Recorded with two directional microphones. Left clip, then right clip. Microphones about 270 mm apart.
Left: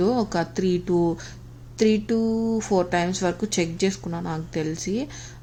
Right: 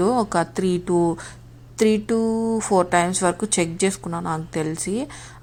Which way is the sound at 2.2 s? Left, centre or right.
Right.